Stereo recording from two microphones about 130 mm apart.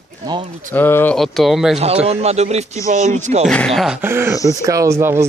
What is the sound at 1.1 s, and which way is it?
Speech, centre (ahead or behind).